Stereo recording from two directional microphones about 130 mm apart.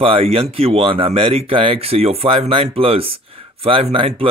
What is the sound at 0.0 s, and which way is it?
Speech, 45° right (ahead or behind).